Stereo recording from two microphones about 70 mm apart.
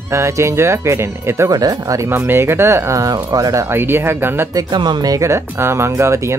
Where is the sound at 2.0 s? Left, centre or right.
Right.